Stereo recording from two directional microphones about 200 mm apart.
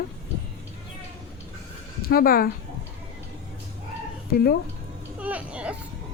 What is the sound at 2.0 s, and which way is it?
Speech, 45° left (ahead or behind).